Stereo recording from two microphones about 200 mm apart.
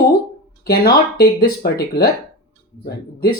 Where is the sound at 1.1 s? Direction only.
50° left (ahead or behind).